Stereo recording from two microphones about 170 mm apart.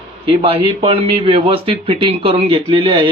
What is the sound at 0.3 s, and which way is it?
Speech, 30° right (ahead or behind).